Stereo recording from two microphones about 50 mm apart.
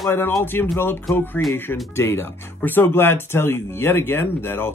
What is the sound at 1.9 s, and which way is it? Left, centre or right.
Speech, left.